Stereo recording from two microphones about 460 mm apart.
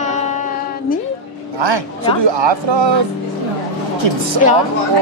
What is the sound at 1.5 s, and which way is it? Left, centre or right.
A man's voice, right.